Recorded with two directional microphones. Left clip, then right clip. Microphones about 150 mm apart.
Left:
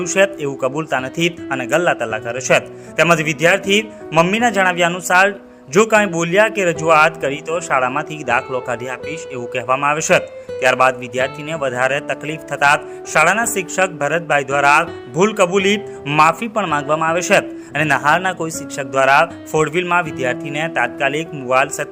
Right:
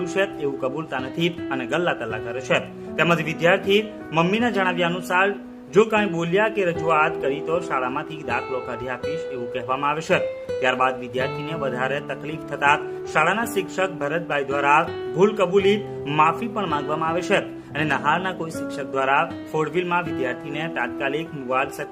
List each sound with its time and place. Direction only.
0.0 s speech: 30° left (ahead or behind)